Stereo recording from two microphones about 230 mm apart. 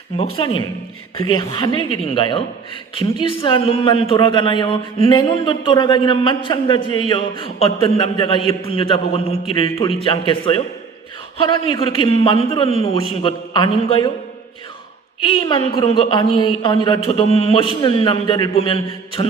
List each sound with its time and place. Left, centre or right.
0.3 s a man's voice: left
11.7 s a man's voice: left
15.2 s a man's voice: left